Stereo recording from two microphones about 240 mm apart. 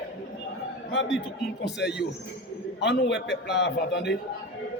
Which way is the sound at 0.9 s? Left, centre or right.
Left.